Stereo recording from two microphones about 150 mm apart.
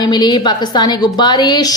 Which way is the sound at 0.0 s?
30° left (ahead or behind).